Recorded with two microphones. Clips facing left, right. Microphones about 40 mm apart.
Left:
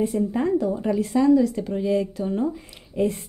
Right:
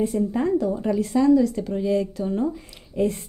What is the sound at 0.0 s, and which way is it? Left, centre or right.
Speech, centre.